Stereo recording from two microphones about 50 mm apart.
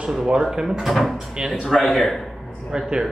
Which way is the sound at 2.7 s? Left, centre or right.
Centre.